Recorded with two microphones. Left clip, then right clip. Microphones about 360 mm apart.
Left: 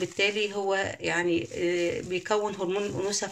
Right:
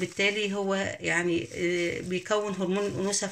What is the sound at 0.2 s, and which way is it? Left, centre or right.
Speech, left.